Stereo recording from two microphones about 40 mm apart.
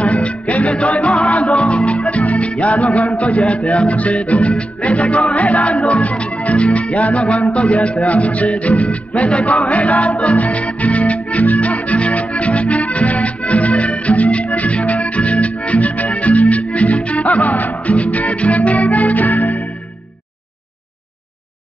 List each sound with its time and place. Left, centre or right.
0.0 s music: left